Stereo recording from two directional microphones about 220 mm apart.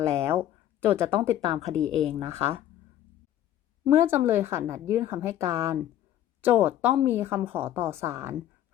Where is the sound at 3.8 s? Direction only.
10° right (ahead or behind).